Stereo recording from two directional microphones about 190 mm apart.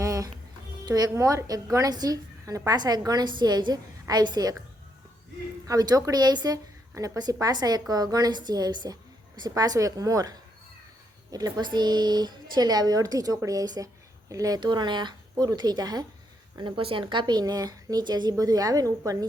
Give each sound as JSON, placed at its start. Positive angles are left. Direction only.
{"t": 0.0, "sound": "music", "side_deg": -15}
{"t": 0.9, "sound": "a woman's voice", "side_deg": -20}
{"t": 5.6, "sound": "a woman's voice", "side_deg": -20}